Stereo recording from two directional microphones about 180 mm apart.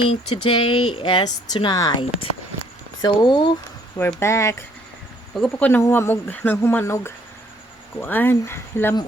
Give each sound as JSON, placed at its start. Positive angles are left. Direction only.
{"t": 0.1, "sound": "speech", "side_deg": 30}
{"t": 3.9, "sound": "speech", "side_deg": 15}
{"t": 5.3, "sound": "speech", "side_deg": 5}